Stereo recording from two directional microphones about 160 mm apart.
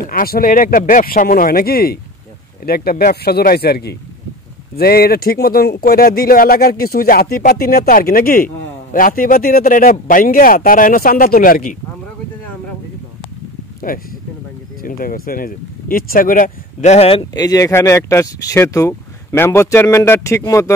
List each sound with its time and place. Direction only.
0.1 s speech: 65° left (ahead or behind)
13.7 s a sound: 60° left (ahead or behind)
14.8 s speech: 60° left (ahead or behind); by 17.3 s 35° left (ahead or behind)
17.3 s speech: 20° left (ahead or behind)